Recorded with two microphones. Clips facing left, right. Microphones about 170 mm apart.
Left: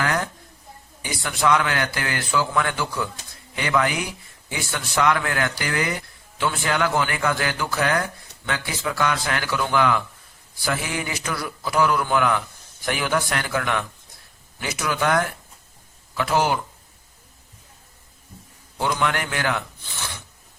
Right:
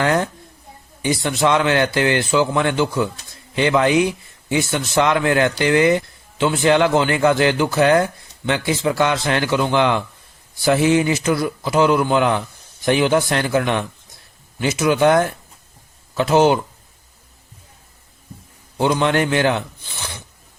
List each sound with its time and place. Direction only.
0.0 s a man's voice: 25° right (ahead or behind)
18.8 s a man's voice: 25° right (ahead or behind)